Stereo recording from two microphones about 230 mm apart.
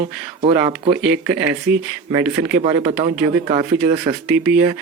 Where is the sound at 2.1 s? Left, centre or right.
Centre.